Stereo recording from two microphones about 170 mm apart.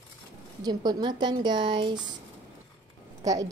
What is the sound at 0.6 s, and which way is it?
A woman's voice, 25° right (ahead or behind).